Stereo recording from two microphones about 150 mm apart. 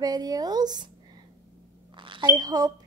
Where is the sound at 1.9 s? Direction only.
35° right (ahead or behind).